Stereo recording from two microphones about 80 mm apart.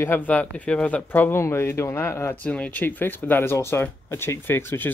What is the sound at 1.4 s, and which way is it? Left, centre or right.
Speech, left.